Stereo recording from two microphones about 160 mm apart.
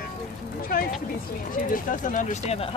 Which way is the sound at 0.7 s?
70° left (ahead or behind).